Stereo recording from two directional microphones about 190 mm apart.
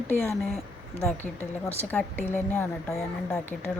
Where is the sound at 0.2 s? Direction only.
5° left (ahead or behind).